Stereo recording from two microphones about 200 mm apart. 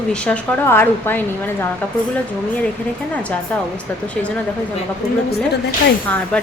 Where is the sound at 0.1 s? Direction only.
5° left (ahead or behind).